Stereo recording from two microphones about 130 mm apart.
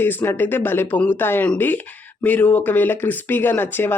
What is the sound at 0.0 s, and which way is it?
Speech, 15° left (ahead or behind).